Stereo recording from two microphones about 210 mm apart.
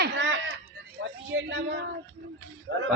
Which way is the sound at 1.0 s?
60° right (ahead or behind).